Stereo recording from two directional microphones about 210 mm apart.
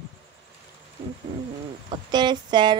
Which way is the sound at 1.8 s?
20° right (ahead or behind).